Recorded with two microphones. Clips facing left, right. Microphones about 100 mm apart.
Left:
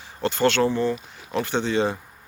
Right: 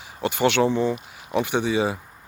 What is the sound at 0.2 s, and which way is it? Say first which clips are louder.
Speech: even; 15° right (ahead or behind).